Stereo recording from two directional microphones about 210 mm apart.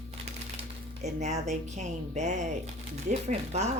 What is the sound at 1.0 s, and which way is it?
Speech, 35° right (ahead or behind).